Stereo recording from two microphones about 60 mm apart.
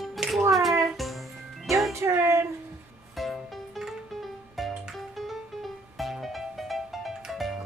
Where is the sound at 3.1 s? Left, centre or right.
Centre.